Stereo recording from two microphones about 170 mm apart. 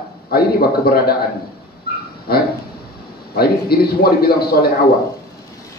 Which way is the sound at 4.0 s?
65° left (ahead or behind).